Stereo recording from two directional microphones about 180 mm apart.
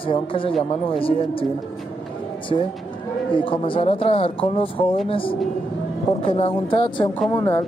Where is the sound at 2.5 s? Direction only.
30° left (ahead or behind).